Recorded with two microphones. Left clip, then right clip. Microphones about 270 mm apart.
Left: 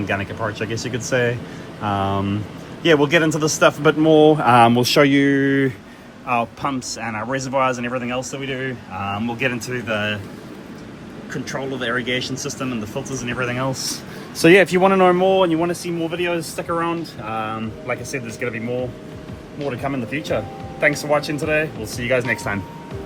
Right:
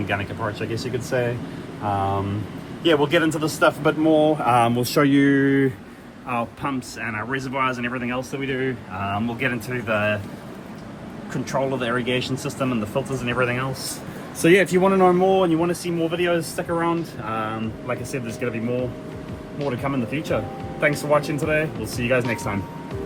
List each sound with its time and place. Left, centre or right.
0.1 s speech: left
1.8 s a man's voice: left
4.8 s speech: centre
5.1 s speech: centre
11.8 s speech: right
12.0 s speech: centre
13.4 s speech: centre
14.4 s speech: left; by 18.5 s centre
19.5 s speech: centre